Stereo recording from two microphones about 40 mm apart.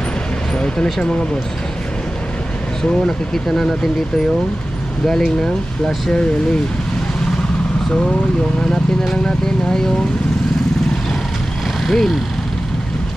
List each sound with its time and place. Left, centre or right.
5.0 s speech: centre
9.0 s speech: centre
11.8 s vehicle: centre